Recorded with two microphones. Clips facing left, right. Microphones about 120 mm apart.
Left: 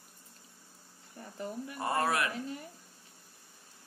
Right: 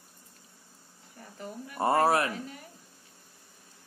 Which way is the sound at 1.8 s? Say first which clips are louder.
Right 7 dB; 30° right (ahead or behind).